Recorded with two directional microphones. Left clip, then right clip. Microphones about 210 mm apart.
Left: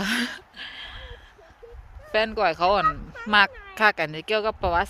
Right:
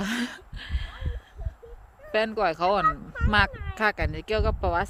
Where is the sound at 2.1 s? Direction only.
15° right (ahead or behind).